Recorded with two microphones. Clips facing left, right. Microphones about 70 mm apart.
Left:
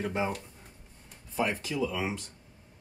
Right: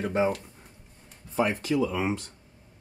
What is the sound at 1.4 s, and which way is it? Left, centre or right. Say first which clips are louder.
Speech: right 5 dB; right.